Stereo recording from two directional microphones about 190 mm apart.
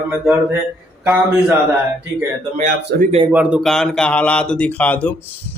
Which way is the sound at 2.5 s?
35° right (ahead or behind).